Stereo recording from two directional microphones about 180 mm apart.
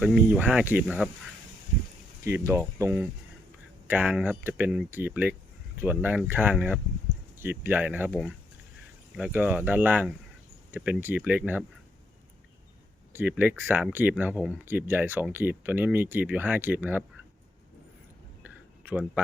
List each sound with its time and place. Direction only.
0.0 s speech: 10° right (ahead or behind)
2.2 s speech: 15° right (ahead or behind)
13.1 s speech: 10° right (ahead or behind)
18.4 s a sound: 10° right (ahead or behind)